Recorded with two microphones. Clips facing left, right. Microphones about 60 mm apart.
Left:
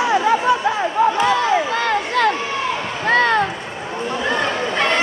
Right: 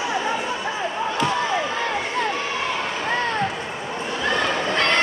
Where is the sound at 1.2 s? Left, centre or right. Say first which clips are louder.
Left 5 dB; left.